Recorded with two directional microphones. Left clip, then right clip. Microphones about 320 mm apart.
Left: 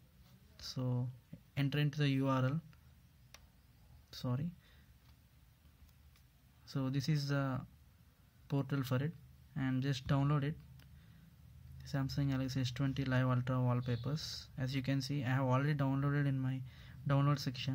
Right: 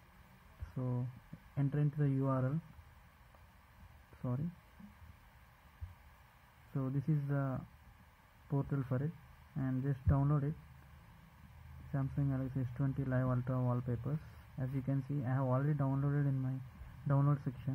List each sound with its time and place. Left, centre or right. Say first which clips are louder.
0.7 s speech: right 1 dB; centre
6.7 s speech: left 1 dB; centre
11.9 s speech: left 1 dB; centre